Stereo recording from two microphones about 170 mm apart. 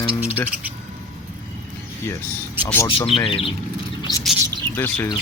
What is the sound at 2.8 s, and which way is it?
Speech, 30° left (ahead or behind).